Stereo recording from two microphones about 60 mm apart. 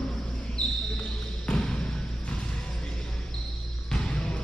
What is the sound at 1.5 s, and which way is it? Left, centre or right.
Basketball bounce, centre.